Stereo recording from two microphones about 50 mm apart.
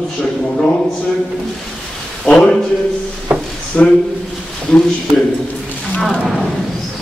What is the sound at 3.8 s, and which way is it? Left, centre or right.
Speech, centre.